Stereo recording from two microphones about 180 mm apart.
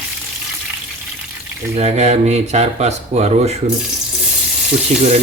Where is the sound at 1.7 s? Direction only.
35° right (ahead or behind).